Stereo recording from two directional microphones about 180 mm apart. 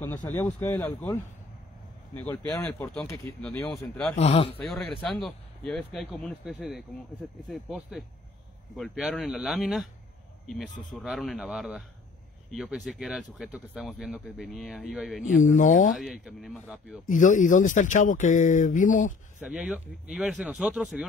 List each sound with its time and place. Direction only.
0.0 s speech: 15° left (ahead or behind)
4.2 s speech: 35° left (ahead or behind)
4.6 s speech: 5° left (ahead or behind)
8.7 s speech: centre (ahead or behind)
10.7 s speech: 45° left (ahead or behind)
11.0 s speech: centre (ahead or behind)
15.4 s speech: 45° left (ahead or behind)
15.9 s speech: centre (ahead or behind)
17.1 s speech: 45° left (ahead or behind)
19.4 s speech: 10° right (ahead or behind)